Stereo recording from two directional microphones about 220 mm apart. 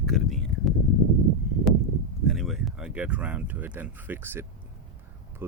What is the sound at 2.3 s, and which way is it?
Speech, centre (ahead or behind).